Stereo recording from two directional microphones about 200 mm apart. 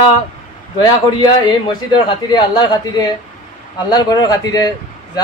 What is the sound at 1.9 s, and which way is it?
A man's voice, 20° left (ahead or behind).